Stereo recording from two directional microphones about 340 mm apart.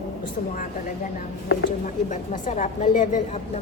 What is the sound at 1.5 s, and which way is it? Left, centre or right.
A woman's voice, left.